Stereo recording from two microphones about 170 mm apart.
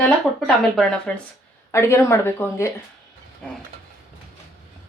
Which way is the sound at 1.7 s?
15° left (ahead or behind).